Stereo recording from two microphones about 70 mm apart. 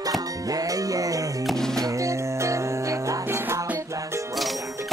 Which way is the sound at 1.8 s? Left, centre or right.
Right.